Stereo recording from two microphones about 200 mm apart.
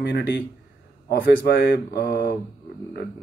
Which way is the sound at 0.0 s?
60° left (ahead or behind).